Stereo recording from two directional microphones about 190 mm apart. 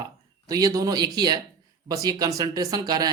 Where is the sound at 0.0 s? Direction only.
20° right (ahead or behind).